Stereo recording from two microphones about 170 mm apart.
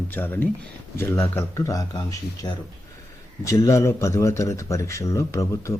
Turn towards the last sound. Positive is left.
turn(degrees=15)  # may be behind; listen again after turning